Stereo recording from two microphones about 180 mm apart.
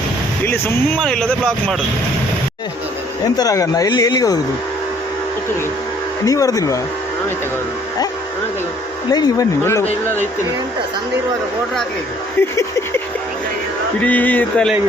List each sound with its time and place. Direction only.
0.4 s speech: 10° left (ahead or behind)
3.3 s speech: 20° left (ahead or behind)
6.2 s speech: 20° left (ahead or behind)
9.1 s speech: 20° left (ahead or behind)
12.4 s speech: 10° left (ahead or behind)
14.0 s speech: 10° left (ahead or behind)